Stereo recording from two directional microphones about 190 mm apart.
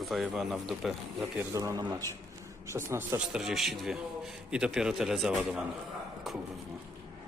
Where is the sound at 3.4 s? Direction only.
Centre (ahead or behind).